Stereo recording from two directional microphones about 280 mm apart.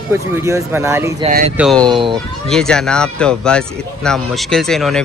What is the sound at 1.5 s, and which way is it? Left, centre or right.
Speech, centre.